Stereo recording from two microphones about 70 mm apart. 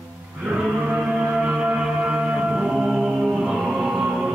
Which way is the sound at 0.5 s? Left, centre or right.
Centre.